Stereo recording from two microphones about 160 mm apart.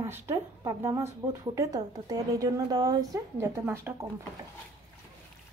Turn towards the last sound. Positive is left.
turn(degrees=-15)  # may be behind; listen again after turning